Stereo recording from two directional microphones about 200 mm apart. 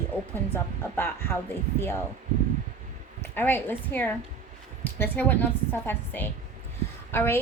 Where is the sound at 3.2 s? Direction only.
10° left (ahead or behind).